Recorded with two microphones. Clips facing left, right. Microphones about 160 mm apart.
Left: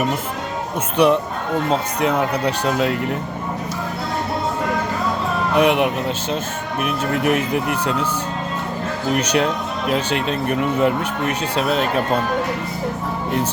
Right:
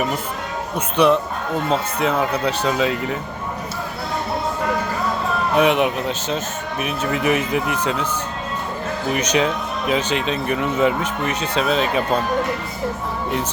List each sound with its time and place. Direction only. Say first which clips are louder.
1.0 s speech: even; 10° left (ahead or behind)
2.1 s speech: left 1 dB; 10° left (ahead or behind)
5.5 s speech: left 1 dB; 10° left (ahead or behind)
7.1 s speech: even; 55° left (ahead or behind)
9.2 s speech: even; 10° left (ahead or behind)